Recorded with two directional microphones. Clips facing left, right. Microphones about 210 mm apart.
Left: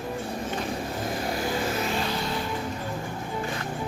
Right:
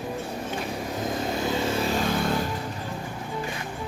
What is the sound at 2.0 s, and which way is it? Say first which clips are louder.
Vehicle: right 4 dB; 50° right (ahead or behind).